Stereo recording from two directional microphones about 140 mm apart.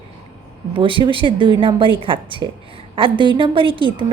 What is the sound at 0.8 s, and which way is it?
A woman's voice, 35° right (ahead or behind).